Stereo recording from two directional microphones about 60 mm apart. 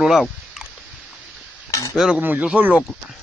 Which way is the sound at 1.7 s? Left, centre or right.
Left.